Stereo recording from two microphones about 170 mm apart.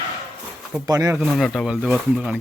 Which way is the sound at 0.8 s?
20° right (ahead or behind).